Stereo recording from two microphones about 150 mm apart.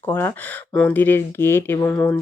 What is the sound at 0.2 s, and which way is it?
Speech, 10° left (ahead or behind).